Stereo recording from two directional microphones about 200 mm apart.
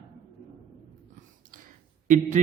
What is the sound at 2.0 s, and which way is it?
Speech, 40° right (ahead or behind).